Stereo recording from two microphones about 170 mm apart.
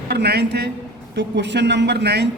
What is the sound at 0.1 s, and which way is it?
Speech, 75° right (ahead or behind).